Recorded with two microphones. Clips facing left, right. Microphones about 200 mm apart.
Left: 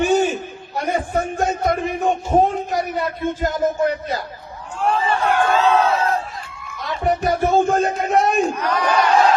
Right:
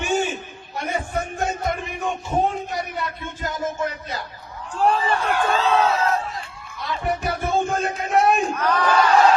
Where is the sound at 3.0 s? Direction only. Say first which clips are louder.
Left 8 dB; 40° left (ahead or behind).